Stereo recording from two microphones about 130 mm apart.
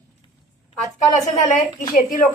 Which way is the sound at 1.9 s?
90° left.